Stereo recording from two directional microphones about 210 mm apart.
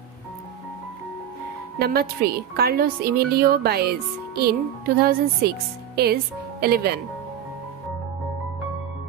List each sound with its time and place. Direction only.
1.8 s a woman's voice: 50° right (ahead or behind)